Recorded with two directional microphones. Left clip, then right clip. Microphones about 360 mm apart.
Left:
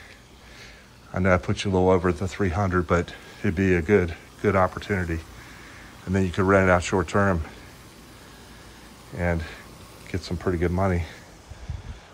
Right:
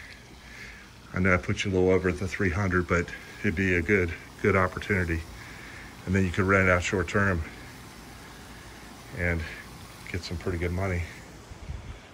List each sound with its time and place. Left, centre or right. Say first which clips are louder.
1.1 s speech: left 3 dB; centre
9.2 s speech: left 2 dB; centre
10.0 s a sound: left 2 dB; centre
10.4 s speech: left 7 dB; left